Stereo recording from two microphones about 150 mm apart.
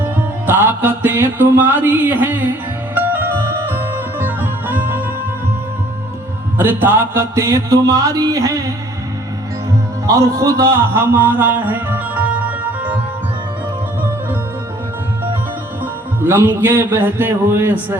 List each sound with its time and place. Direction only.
0.0 s music: 15° right (ahead or behind)
6.6 s music: 15° right (ahead or behind)
10.1 s speech: 20° right (ahead or behind)
15.8 s music: 15° right (ahead or behind)